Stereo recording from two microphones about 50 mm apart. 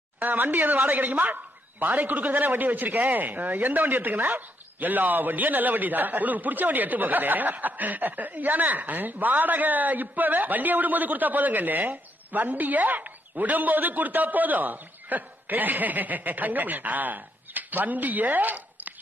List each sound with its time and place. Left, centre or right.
0.2 s speech: right